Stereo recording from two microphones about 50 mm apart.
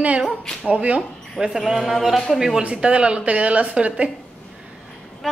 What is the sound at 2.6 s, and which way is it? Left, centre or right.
Speech, right.